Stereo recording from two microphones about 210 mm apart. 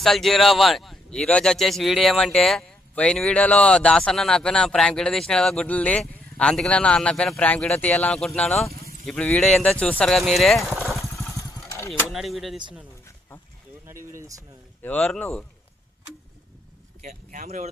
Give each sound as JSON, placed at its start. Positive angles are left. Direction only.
{"t": 0.0, "sound": "speech", "side_deg": 0}
{"t": 11.1, "sound": "vehicle", "side_deg": 15}
{"t": 12.1, "sound": "speech", "side_deg": 0}
{"t": 13.8, "sound": "a sound", "side_deg": -15}
{"t": 14.8, "sound": "speech", "side_deg": 5}
{"t": 17.0, "sound": "speech", "side_deg": -40}